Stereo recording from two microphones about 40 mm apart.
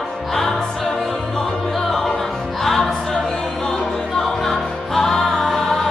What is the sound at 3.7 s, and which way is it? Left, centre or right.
Music, centre.